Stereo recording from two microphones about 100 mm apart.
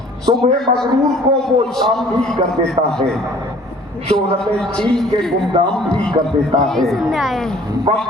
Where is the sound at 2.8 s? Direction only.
90° right.